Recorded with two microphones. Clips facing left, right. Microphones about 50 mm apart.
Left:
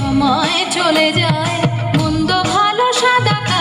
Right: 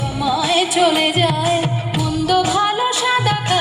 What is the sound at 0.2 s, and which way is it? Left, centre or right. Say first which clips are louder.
Music: even; left.